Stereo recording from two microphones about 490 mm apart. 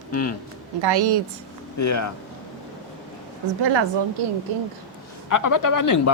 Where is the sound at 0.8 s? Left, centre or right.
Right.